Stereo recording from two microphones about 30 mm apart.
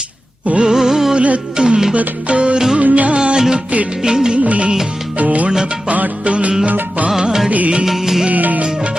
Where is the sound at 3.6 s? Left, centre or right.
Right.